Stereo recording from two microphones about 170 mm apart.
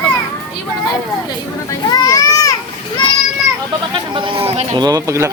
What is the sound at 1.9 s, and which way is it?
Speech, 20° left (ahead or behind).